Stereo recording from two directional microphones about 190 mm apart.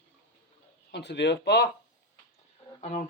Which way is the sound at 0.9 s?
65° left (ahead or behind).